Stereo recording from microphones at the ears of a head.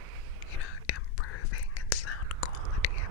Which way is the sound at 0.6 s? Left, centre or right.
Left.